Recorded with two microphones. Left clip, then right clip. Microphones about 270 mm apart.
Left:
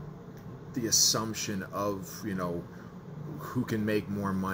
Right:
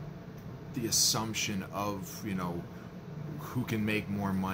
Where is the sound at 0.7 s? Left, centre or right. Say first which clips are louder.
Left 3 dB; centre.